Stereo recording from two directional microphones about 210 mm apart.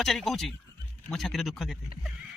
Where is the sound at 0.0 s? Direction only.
Centre (ahead or behind).